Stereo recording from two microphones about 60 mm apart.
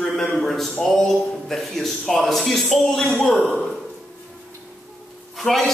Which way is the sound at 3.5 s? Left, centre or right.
Centre.